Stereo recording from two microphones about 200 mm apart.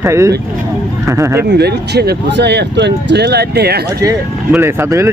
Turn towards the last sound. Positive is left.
turn(degrees=-15)  # may be behind; listen again after turning